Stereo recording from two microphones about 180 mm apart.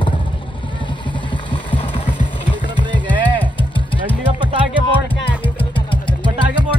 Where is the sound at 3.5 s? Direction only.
30° left (ahead or behind).